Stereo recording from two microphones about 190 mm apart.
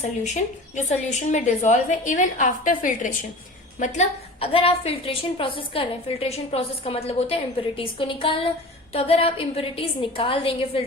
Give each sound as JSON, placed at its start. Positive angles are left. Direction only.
{"t": 0.0, "sound": "a woman's voice", "side_deg": 40}